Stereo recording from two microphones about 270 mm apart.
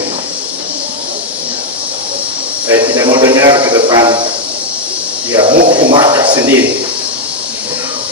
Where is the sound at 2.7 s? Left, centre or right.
Centre.